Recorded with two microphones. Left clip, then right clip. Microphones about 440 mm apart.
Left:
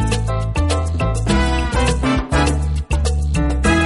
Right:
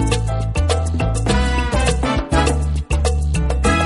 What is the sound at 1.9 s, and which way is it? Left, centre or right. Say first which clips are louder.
Music: even; right.